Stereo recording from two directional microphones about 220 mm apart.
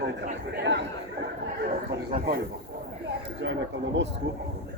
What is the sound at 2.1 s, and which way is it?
Speech, 45° right (ahead or behind).